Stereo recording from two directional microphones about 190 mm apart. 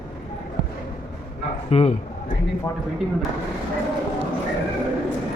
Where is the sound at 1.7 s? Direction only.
35° left (ahead or behind).